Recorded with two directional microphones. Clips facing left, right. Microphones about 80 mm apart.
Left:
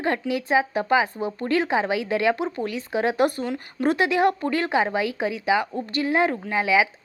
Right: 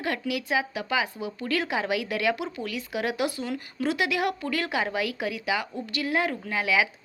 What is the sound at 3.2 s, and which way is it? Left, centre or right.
Speech, left.